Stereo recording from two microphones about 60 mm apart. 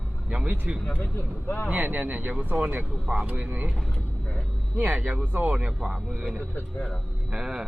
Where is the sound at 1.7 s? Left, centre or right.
Right.